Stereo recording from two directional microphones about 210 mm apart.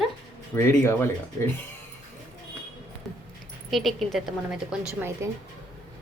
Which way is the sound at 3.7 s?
Centre (ahead or behind).